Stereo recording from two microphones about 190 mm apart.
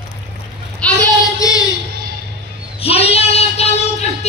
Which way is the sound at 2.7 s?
30° left (ahead or behind).